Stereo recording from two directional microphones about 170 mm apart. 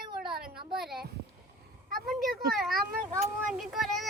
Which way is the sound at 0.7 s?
Centre (ahead or behind).